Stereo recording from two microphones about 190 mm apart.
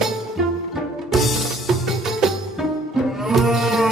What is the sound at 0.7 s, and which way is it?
Music, centre (ahead or behind).